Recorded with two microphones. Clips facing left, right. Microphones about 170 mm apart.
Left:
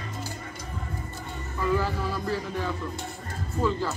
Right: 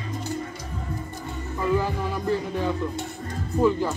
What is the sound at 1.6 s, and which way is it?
Music, 20° right (ahead or behind).